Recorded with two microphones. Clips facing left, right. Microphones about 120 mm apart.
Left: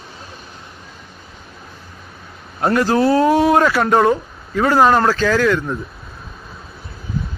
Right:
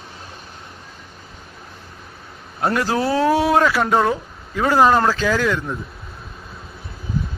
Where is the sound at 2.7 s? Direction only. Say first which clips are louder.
Left 5 dB; 5° right (ahead or behind).